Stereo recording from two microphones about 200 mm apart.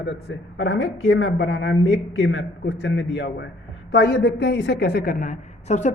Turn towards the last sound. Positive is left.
turn(degrees=35)  # may be behind; listen again after turning